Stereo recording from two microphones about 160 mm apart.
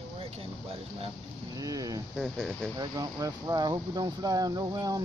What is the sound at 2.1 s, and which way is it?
Speech, centre (ahead or behind).